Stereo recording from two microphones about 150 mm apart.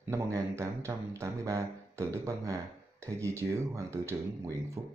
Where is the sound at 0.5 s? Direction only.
20° right (ahead or behind).